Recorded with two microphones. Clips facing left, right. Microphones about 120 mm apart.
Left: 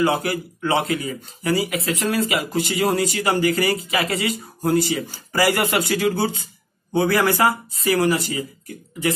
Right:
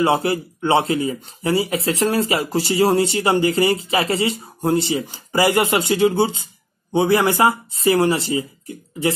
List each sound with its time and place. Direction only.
0.0 s speech: 30° right (ahead or behind)